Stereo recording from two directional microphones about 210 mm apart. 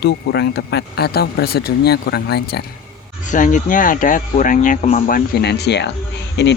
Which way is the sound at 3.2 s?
35° left (ahead or behind).